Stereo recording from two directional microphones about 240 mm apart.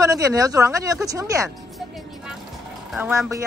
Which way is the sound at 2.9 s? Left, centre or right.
Centre.